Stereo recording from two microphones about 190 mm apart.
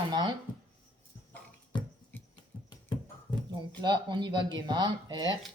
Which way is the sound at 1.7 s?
25° left (ahead or behind).